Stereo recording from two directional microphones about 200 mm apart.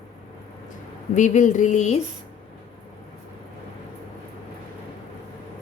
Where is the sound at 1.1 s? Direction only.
40° left (ahead or behind).